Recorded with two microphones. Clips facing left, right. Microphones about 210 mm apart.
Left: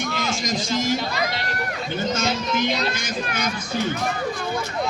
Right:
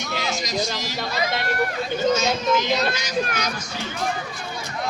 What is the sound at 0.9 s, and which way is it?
Speech, 50° right (ahead or behind).